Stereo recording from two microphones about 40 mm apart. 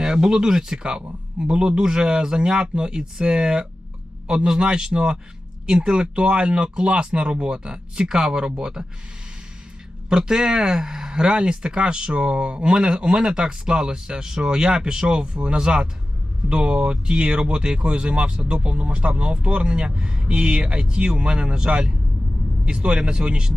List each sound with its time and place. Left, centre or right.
0.0 s speech: centre
10.1 s speech: centre